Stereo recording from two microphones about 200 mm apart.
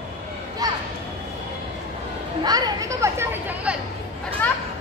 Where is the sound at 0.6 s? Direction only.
20° right (ahead or behind).